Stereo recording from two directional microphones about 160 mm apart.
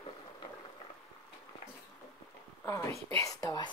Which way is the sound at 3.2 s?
20° left (ahead or behind).